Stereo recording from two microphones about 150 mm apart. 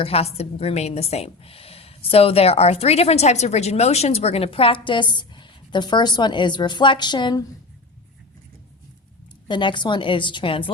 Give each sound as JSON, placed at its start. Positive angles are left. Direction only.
{"t": 0.0, "sound": "a woman's voice", "side_deg": 40}
{"t": 9.5, "sound": "a woman's voice", "side_deg": 30}